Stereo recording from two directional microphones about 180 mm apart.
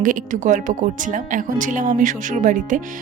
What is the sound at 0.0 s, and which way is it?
Speech, 45° right (ahead or behind).